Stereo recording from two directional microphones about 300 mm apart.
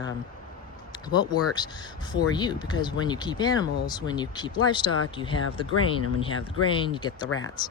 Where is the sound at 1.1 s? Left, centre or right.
Centre.